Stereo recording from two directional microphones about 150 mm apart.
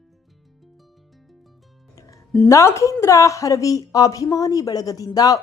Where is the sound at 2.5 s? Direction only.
20° left (ahead or behind).